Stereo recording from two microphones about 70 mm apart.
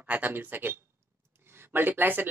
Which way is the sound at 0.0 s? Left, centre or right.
Right.